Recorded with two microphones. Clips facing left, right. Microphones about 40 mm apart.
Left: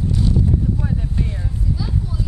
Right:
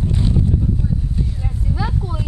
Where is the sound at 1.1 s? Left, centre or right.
Left.